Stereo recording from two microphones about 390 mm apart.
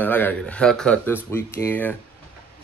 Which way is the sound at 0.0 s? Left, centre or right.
Centre.